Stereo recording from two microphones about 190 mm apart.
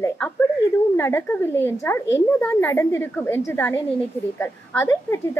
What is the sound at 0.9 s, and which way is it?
A woman's voice, 10° left (ahead or behind).